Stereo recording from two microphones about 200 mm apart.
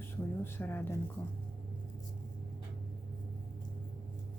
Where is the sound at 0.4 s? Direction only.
10° left (ahead or behind).